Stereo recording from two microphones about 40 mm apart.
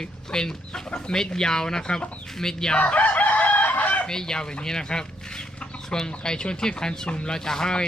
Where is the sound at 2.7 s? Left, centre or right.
Left.